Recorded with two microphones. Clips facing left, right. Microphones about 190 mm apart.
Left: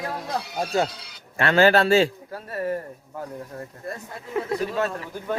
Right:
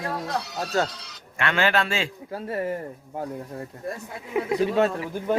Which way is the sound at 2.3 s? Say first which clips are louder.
Right 1 dB; 25° right (ahead or behind).